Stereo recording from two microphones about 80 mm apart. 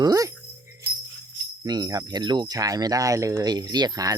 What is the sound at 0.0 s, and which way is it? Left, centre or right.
Jingle bell, right.